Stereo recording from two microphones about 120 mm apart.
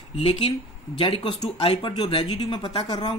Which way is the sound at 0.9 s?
40° left (ahead or behind).